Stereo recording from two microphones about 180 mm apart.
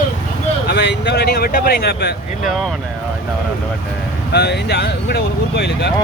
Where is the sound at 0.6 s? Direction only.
70° left (ahead or behind).